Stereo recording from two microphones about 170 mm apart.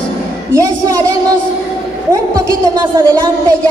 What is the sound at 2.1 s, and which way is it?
A woman's voice, 20° right (ahead or behind).